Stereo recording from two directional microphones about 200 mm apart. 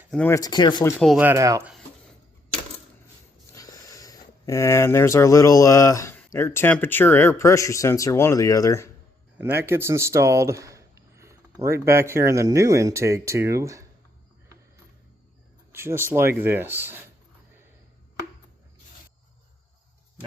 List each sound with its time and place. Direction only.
0.1 s speech: 5° left (ahead or behind)
0.3 s speech: 20° left (ahead or behind)
0.9 s speech: centre (ahead or behind)
1.2 s speech: 15° right (ahead or behind)
3.5 s speech: 15° left (ahead or behind)
9.4 s speech: 10° right (ahead or behind)
15.7 s speech: 10° right (ahead or behind)